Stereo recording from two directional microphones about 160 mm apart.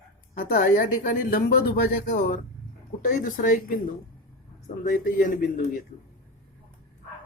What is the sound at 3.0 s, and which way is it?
Speech, 60° left (ahead or behind).